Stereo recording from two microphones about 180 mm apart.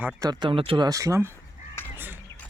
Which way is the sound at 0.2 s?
25° right (ahead or behind).